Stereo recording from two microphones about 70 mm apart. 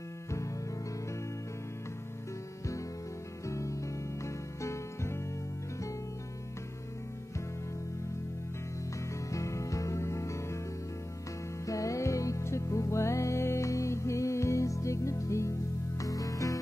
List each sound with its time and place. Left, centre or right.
0.3 s music: left
3.4 s music: left
9.3 s music: left
11.6 s music: left